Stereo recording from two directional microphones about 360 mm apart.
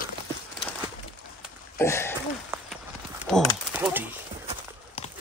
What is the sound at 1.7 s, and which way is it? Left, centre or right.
Throat clearing, centre.